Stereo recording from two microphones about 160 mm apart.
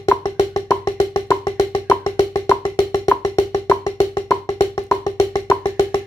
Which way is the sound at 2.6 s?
30° left (ahead or behind).